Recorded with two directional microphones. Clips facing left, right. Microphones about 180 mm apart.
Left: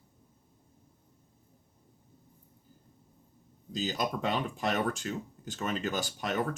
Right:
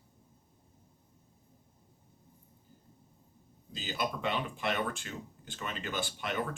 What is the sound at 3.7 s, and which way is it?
Speech, 40° left (ahead or behind).